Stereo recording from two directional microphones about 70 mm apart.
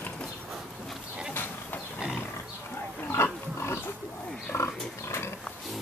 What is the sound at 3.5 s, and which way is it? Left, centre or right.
Pig, left.